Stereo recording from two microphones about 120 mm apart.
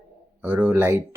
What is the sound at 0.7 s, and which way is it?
Speech, 20° right (ahead or behind).